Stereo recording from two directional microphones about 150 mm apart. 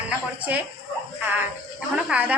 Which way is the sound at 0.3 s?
10° right (ahead or behind).